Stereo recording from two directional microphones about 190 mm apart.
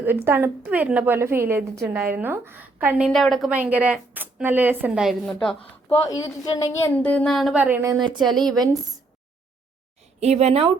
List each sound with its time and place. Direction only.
0.3 s a woman's voice: 10° right (ahead or behind)
6.1 s speech: 20° left (ahead or behind); by 8.3 s 25° right (ahead or behind)
8.3 s a woman's voice: centre (ahead or behind)
10.2 s a woman's voice: 35° right (ahead or behind)